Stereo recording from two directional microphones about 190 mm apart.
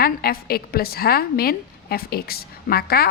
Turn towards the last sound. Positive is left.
turn(degrees=55)  # may be behind; listen again after turning